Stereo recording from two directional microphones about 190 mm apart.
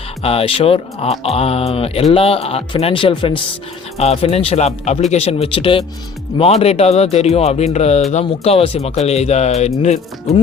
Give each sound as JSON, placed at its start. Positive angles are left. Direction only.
{"t": 0.2, "sound": "speech", "side_deg": 30}